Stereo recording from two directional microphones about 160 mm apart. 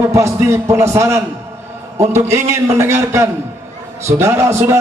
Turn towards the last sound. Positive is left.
turn(degrees=-15)  # may be behind; listen again after turning